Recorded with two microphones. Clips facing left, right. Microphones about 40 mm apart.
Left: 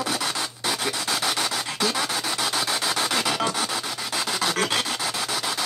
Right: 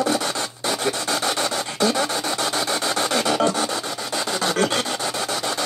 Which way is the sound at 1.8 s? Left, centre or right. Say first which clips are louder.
Right 5 dB; centre.